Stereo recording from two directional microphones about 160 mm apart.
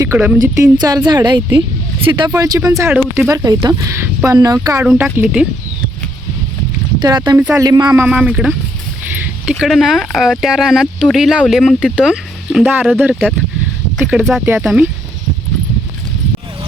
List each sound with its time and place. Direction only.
0.0 s speech: 10° right (ahead or behind)
4.8 s speech: 5° right (ahead or behind)
7.3 s speech: 10° right (ahead or behind)
7.6 s speech: 25° right (ahead or behind)
8.0 s speech: 5° right (ahead or behind)